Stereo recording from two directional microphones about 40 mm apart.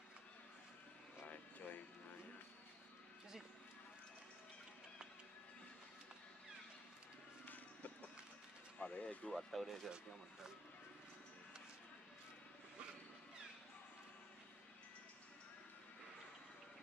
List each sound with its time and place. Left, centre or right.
1.2 s vehicle: left
7.4 s music: left
8.7 s vehicle: left
9.3 s speech: centre